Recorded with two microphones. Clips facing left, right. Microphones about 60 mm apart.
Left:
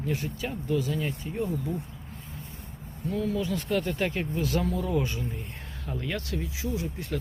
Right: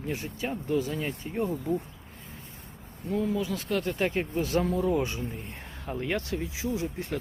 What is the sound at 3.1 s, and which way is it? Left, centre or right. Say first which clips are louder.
Speech: right 1 dB; right.